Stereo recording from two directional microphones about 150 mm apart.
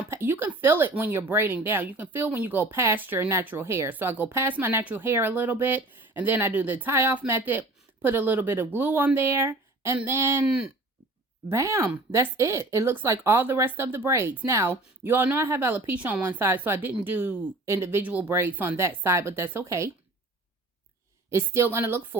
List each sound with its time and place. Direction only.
0.1 s speech: 15° right (ahead or behind)
11.4 s speech: 20° right (ahead or behind)
21.2 s speech: 20° right (ahead or behind)